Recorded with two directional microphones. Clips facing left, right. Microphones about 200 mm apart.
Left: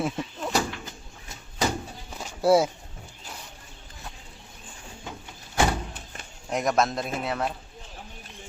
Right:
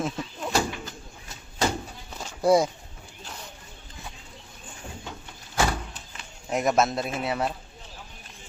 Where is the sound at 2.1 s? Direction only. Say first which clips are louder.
Even; 5° left (ahead or behind).